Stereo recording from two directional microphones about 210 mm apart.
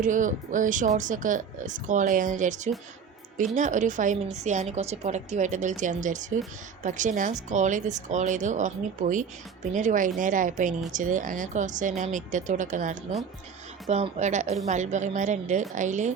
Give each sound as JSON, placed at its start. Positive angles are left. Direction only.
{"t": 0.0, "sound": "a woman's voice", "side_deg": -40}